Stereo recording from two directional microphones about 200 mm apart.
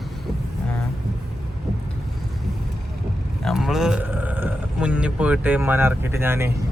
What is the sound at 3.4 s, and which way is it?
Speech, centre (ahead or behind).